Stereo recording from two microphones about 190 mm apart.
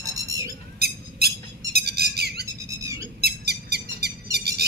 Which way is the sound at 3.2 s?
60° right (ahead or behind).